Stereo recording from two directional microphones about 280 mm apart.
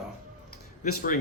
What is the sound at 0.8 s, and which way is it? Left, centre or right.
Speech, left.